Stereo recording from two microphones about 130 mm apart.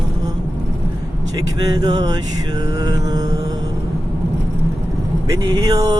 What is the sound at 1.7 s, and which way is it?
Mantra, 30° right (ahead or behind).